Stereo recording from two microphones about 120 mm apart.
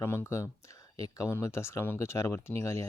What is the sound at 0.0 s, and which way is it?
Speech, 20° left (ahead or behind).